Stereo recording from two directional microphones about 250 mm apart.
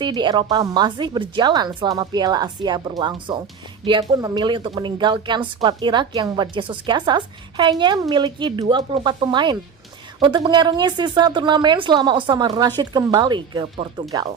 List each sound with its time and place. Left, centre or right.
0.0 s a woman's voice: centre